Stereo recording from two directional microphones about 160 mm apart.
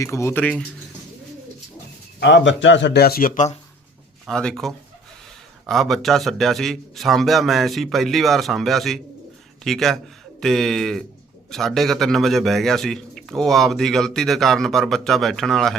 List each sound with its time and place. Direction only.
0.0 s speech: 20° left (ahead or behind)
2.2 s speech: 90° left; by 3.6 s 50° left (ahead or behind)
4.3 s a man's voice: 5° left (ahead or behind)